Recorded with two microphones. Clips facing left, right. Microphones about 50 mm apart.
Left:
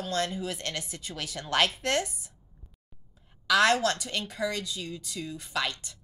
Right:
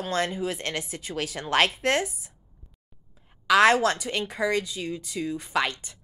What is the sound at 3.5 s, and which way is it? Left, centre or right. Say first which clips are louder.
A woman's voice: right 4 dB; centre.